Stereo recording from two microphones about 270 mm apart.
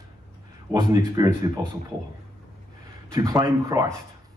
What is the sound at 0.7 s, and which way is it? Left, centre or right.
Speech, centre.